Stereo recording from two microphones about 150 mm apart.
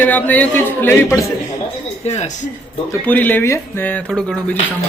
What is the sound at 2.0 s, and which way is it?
Speech, 50° left (ahead or behind).